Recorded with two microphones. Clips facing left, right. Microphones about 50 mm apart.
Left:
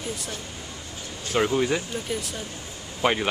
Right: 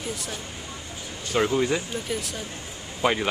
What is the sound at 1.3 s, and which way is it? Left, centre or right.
Speech, centre.